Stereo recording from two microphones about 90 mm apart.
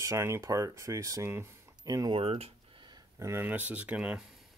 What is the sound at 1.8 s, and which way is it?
Speech, 45° right (ahead or behind).